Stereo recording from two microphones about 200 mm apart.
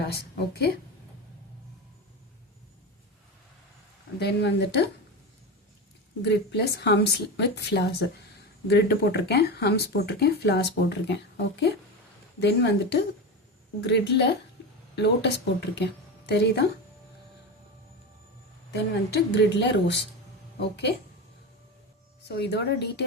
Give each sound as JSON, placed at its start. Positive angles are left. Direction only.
{"t": 0.0, "sound": "a woman's voice", "side_deg": 55}
{"t": 4.2, "sound": "speech", "side_deg": 55}
{"t": 6.2, "sound": "a woman's voice", "side_deg": 60}
{"t": 18.7, "sound": "speech", "side_deg": 55}
{"t": 22.4, "sound": "speech", "side_deg": 55}